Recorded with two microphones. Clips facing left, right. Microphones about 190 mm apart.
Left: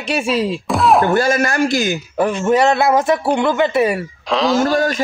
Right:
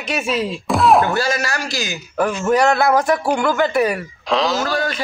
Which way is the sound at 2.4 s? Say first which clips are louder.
Left 1 dB; 25° left (ahead or behind).